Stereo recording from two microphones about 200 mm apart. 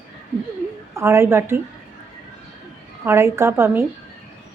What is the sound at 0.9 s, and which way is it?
Speech, 10° right (ahead or behind).